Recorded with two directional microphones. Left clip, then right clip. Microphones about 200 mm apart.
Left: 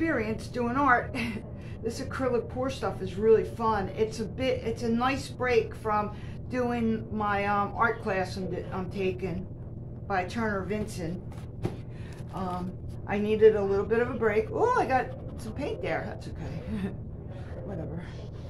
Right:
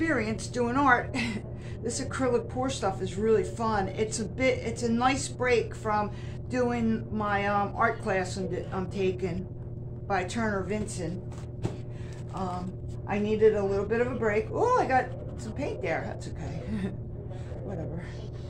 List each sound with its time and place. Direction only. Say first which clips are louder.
0.0 s speech: even; 20° right (ahead or behind)
13.1 s a man's voice: left 2 dB; 5° right (ahead or behind)